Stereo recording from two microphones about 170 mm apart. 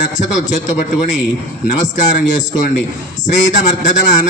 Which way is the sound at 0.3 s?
50° left (ahead or behind).